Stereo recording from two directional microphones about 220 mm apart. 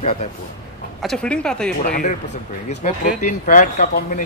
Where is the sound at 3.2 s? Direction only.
35° left (ahead or behind).